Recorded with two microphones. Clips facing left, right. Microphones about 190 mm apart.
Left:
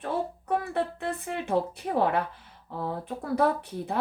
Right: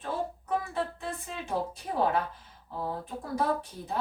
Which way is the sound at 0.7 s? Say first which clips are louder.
Left 4 dB; 65° left (ahead or behind).